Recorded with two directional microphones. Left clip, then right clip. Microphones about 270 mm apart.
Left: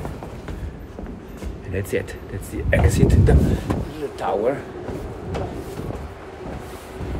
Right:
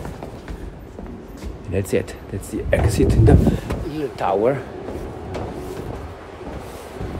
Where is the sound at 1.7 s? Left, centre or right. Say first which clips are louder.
Right 3 dB; right.